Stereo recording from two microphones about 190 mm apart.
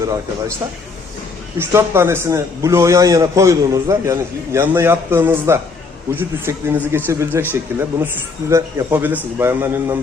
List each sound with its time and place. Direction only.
0.0 s a man's voice: 15° right (ahead or behind)
1.5 s a man's voice: 10° right (ahead or behind)